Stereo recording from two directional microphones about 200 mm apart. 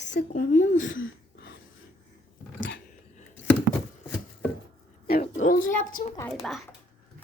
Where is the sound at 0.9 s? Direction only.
70° left (ahead or behind).